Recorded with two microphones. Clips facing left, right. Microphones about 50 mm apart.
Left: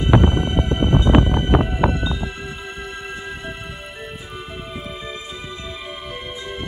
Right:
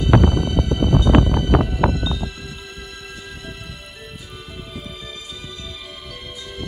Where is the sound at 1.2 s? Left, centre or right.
Left.